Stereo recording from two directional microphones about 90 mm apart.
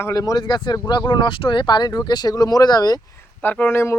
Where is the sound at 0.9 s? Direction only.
60° left (ahead or behind).